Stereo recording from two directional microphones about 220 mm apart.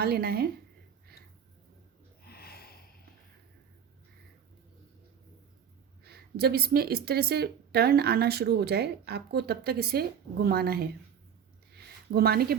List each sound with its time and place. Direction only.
0.0 s speech: 45° right (ahead or behind)
2.2 s snort: 45° left (ahead or behind)
6.1 s speech: 45° right (ahead or behind)
12.1 s speech: 45° right (ahead or behind)